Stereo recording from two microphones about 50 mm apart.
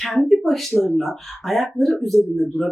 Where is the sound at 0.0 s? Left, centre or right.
Centre.